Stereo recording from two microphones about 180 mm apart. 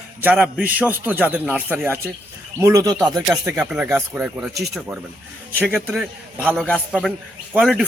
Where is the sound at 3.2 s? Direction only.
10° right (ahead or behind).